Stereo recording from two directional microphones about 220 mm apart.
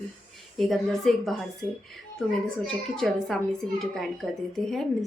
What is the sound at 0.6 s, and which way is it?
Speech, centre (ahead or behind).